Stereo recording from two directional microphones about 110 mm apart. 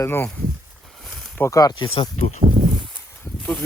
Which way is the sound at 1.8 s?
50° left (ahead or behind).